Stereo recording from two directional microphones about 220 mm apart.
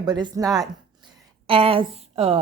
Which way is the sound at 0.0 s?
20° right (ahead or behind).